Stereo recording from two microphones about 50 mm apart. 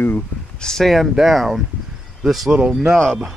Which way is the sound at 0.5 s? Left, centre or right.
Centre.